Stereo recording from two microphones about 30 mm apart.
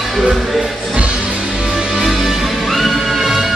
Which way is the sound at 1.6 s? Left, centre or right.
Right.